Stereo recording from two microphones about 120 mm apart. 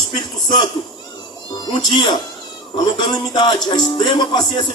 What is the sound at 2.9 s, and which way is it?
Music, 40° left (ahead or behind).